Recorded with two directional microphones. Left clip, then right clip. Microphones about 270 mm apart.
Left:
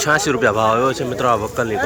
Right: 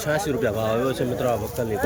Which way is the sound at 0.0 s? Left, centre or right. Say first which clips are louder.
Left 8 dB; centre.